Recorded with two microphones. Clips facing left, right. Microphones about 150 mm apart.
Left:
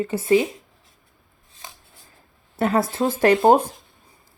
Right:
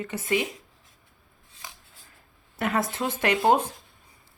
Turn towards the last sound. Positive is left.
turn(degrees=35)  # may be behind; listen again after turning